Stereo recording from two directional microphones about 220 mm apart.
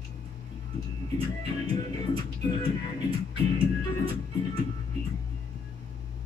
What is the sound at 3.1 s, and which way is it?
Music, 25° right (ahead or behind).